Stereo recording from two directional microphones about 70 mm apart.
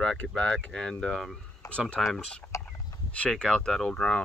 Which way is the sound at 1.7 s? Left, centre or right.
Centre.